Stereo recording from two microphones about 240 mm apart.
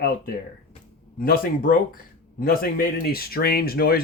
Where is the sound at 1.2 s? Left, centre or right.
Left.